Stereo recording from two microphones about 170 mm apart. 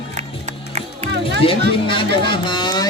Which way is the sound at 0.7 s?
40° right (ahead or behind).